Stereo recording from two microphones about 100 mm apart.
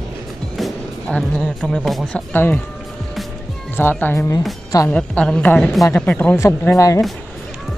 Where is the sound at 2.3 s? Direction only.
20° left (ahead or behind).